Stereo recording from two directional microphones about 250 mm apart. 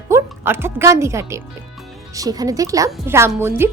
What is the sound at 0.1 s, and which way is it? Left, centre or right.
A woman's voice, centre.